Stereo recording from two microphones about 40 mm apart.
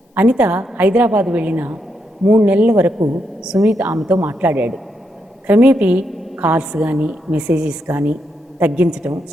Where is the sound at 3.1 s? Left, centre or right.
Centre.